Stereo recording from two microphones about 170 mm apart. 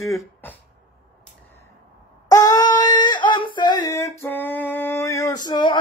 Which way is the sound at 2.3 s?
20° left (ahead or behind).